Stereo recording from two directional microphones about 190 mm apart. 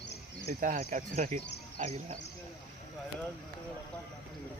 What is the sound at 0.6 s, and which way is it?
Speech, 45° right (ahead or behind).